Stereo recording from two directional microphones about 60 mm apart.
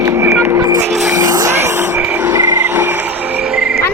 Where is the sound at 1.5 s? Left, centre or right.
Right.